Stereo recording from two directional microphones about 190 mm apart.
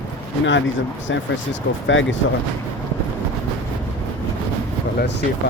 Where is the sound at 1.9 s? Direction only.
85° left.